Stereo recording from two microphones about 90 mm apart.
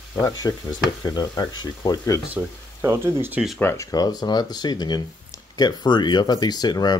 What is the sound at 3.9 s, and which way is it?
Speech, 45° left (ahead or behind).